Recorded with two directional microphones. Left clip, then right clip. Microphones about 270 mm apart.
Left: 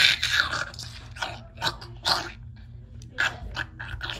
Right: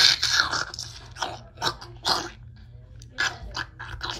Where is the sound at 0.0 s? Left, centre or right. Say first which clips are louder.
Right 1 dB; centre.